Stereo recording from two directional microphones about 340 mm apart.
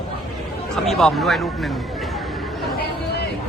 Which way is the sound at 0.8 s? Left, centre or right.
Centre.